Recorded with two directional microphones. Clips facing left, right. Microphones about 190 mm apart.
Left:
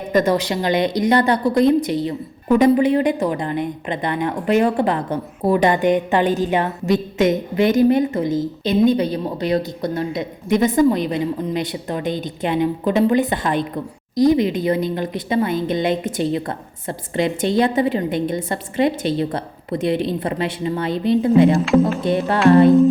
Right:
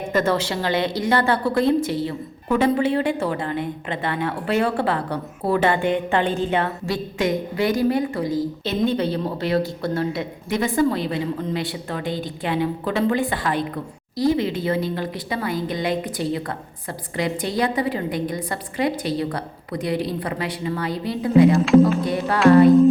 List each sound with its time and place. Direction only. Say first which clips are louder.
0.1 s a woman's voice: left 4 dB; 15° left (ahead or behind)
21.5 s speech: right 1 dB; centre (ahead or behind)
22.0 s a woman's voice: left 4 dB; 25° left (ahead or behind)